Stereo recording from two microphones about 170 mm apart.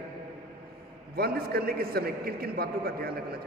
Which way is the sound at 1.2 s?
65° right (ahead or behind).